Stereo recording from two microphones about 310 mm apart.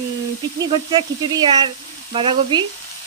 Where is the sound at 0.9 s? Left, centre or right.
Centre.